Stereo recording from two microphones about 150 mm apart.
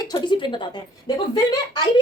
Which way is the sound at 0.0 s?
30° left (ahead or behind).